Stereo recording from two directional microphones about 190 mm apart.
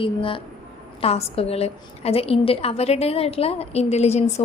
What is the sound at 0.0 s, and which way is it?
A woman's voice, 25° left (ahead or behind).